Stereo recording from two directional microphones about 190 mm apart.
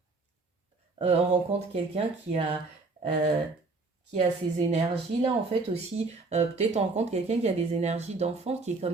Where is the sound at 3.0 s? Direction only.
30° right (ahead or behind).